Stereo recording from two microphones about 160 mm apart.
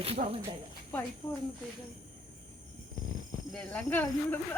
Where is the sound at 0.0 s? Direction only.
40° right (ahead or behind).